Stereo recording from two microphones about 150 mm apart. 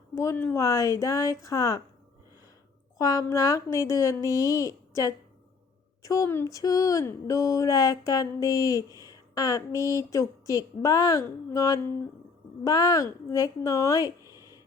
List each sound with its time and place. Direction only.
0.1 s speech: 20° left (ahead or behind)
3.0 s speech: 20° left (ahead or behind)